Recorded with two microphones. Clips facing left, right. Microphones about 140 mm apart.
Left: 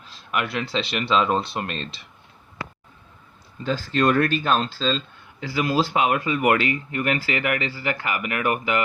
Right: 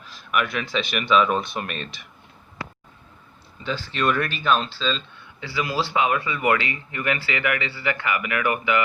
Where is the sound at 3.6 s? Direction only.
45° left (ahead or behind).